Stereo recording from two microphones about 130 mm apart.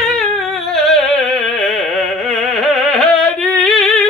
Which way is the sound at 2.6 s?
Centre (ahead or behind).